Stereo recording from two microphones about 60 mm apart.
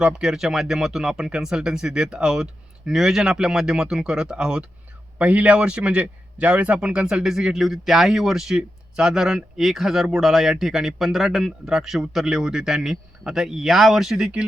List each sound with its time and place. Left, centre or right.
0.0 s a man's voice: centre
5.1 s a man's voice: right